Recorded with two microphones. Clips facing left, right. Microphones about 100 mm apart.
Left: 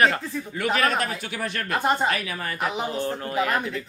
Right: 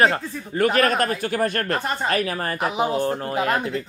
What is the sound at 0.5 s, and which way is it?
Speech, 45° right (ahead or behind).